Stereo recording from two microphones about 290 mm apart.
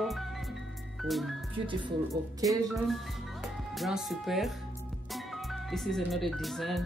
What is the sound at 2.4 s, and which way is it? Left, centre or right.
Speech, centre.